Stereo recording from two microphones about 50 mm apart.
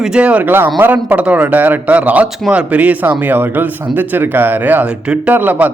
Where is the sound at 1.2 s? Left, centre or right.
Right.